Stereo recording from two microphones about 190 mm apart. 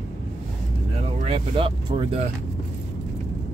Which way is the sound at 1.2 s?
30° right (ahead or behind).